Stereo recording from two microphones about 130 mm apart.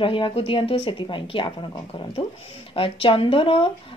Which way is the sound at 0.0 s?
40° left (ahead or behind).